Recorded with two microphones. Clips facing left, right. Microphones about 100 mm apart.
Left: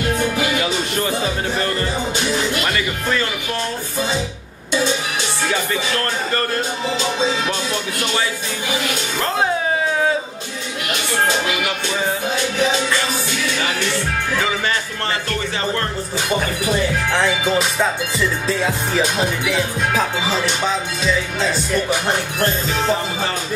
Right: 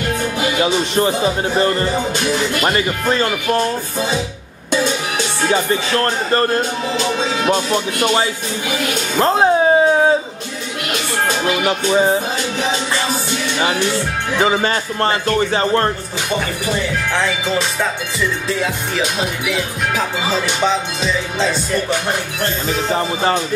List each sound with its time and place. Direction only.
0.6 s speech: 25° right (ahead or behind)
2.6 s music: 35° right (ahead or behind)
5.5 s music: 30° right (ahead or behind)
7.4 s music: 45° right (ahead or behind)
9.2 s a sound: 30° right (ahead or behind)
11.4 s music: 35° right (ahead or behind)
14.4 s music: 35° right (ahead or behind)
17.1 s speech: 5° left (ahead or behind)
18.9 s music: 30° left (ahead or behind)